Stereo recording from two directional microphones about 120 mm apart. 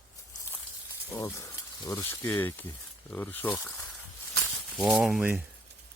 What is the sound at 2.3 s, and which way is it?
Speech, 15° left (ahead or behind).